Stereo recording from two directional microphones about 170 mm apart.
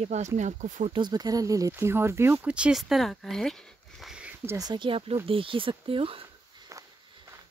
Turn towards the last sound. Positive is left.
turn(degrees=-30)  # may be behind; listen again after turning